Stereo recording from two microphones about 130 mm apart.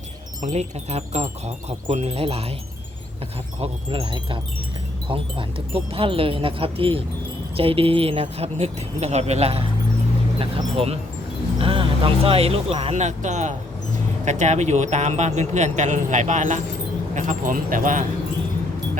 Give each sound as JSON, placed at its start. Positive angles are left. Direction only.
{"t": 0.4, "sound": "speech", "side_deg": -60}
{"t": 3.6, "sound": "speech", "side_deg": -45}
{"t": 17.2, "sound": "speech", "side_deg": -85}